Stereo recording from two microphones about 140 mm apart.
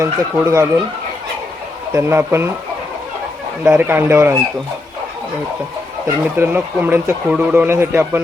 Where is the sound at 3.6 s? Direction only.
15° right (ahead or behind).